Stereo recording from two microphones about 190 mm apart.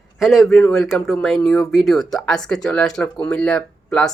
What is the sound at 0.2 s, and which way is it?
Speech, centre (ahead or behind).